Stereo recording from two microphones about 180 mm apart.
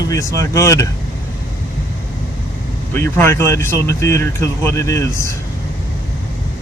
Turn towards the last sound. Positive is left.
turn(degrees=15)  # may be behind; listen again after turning